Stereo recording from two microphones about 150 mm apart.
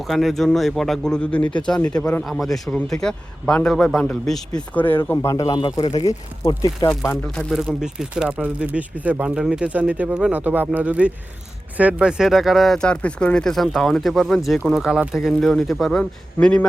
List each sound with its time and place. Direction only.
0.1 s speech: centre (ahead or behind)
7.5 s speech: 5° right (ahead or behind)